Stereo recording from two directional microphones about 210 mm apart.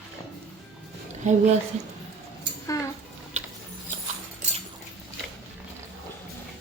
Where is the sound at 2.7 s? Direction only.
15° left (ahead or behind).